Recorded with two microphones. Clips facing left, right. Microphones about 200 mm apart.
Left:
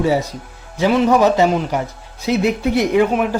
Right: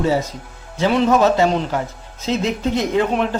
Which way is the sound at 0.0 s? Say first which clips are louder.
Left 2 dB; 15° left (ahead or behind).